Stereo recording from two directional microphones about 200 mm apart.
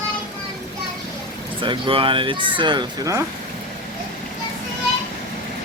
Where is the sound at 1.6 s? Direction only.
25° right (ahead or behind).